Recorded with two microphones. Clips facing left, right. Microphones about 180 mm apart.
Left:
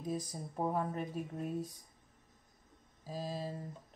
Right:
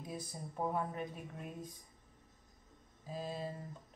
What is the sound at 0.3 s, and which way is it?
Speech, 40° left (ahead or behind).